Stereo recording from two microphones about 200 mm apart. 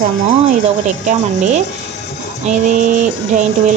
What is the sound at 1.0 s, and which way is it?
Speech, 35° right (ahead or behind).